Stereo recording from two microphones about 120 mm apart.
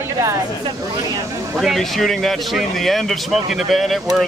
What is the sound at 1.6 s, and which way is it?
Speech, centre (ahead or behind).